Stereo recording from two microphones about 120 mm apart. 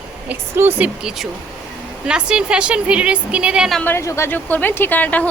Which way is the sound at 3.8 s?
20° left (ahead or behind).